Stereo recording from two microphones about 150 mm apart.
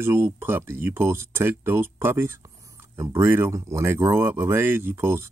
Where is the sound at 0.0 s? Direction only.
15° right (ahead or behind).